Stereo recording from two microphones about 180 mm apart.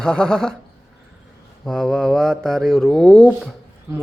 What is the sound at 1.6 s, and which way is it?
Mantra, centre (ahead or behind).